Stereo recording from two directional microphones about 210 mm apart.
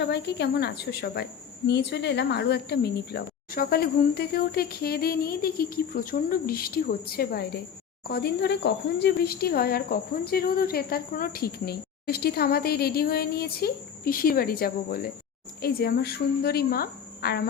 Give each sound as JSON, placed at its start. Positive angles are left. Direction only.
{"t": 0.0, "sound": "a woman's voice", "side_deg": 55}